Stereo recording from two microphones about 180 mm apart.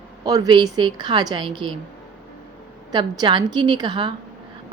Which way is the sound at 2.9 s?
20° right (ahead or behind).